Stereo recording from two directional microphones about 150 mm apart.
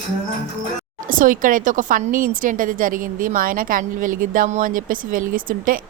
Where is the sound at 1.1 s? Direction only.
65° right (ahead or behind).